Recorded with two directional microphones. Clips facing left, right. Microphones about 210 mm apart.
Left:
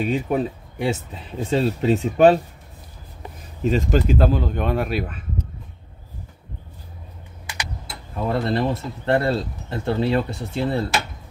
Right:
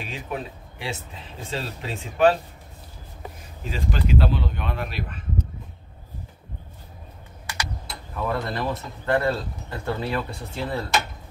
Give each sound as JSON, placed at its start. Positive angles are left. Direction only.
{"t": 0.1, "sound": "speech", "side_deg": 40}
{"t": 3.7, "sound": "speech", "side_deg": 45}
{"t": 8.2, "sound": "speech", "side_deg": 25}